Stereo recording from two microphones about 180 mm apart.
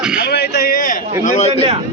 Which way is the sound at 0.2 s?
65° left (ahead or behind).